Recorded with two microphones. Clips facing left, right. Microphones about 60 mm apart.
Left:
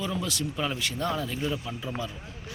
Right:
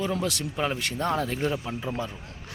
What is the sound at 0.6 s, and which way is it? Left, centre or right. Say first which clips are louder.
A man's voice: right 4 dB; right.